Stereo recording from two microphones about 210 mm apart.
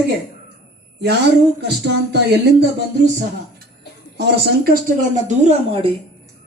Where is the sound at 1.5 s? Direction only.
50° right (ahead or behind).